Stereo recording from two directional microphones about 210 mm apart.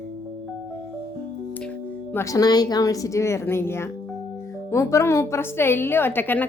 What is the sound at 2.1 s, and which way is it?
A woman's voice, 15° left (ahead or behind).